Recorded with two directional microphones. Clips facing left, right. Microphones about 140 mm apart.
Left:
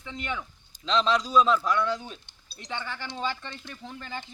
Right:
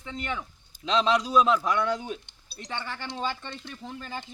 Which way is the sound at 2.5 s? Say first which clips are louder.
Even; centre (ahead or behind).